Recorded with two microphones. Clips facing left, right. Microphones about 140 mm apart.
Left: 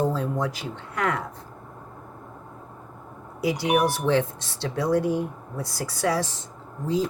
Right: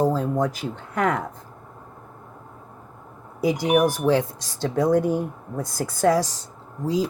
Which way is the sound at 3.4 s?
50° right (ahead or behind).